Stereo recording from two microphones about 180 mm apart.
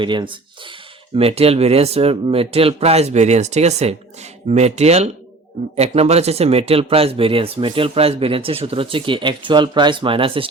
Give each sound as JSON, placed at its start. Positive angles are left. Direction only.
{"t": 0.0, "sound": "speech", "side_deg": -25}